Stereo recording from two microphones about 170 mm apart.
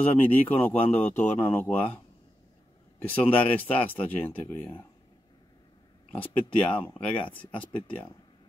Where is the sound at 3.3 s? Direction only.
35° left (ahead or behind).